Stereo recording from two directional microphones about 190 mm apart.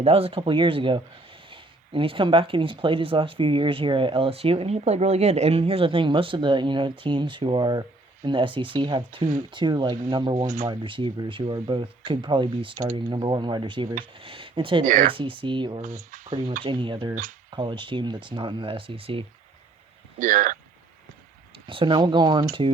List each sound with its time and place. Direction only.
0.0 s speech: 30° right (ahead or behind)
10.4 s speech: 45° right (ahead or behind)
10.7 s speech: 25° right (ahead or behind)
14.8 s speech: 45° right (ahead or behind)
15.1 s speech: 25° right (ahead or behind)
15.8 s speech: 45° right (ahead or behind)
16.6 s speech: 25° right (ahead or behind)
20.1 s speech: 45° right (ahead or behind)
21.7 s speech: 25° right (ahead or behind)